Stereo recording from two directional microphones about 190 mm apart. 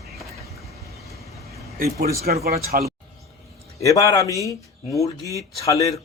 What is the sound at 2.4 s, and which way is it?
Speech, 55° right (ahead or behind).